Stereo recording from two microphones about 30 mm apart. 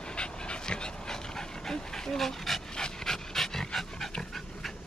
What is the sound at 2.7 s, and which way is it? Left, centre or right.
Dog, left.